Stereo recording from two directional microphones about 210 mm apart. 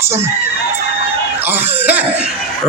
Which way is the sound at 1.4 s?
10° right (ahead or behind).